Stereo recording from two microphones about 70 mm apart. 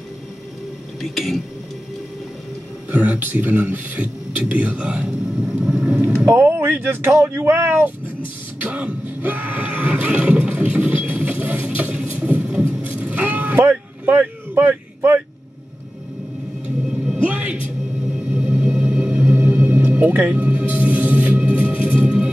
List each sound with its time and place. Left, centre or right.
1.0 s speech: centre
2.9 s speech: right
5.7 s a sound: centre
6.2 s speech: right
8.5 s a sound: centre
16.8 s vehicle: centre
17.2 s music: centre